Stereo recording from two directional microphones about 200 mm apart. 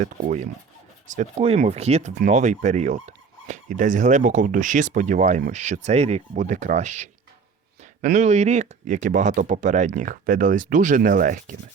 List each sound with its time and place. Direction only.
0.0 s speech: 35° right (ahead or behind)